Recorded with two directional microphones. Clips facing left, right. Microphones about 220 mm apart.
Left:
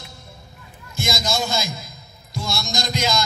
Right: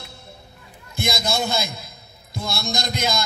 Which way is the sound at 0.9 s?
60° right (ahead or behind).